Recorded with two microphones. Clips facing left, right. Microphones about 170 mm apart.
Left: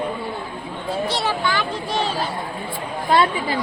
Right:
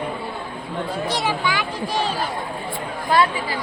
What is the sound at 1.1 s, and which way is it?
Speech, 10° right (ahead or behind).